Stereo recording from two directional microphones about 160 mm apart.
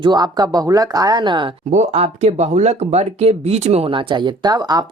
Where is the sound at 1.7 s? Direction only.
45° right (ahead or behind).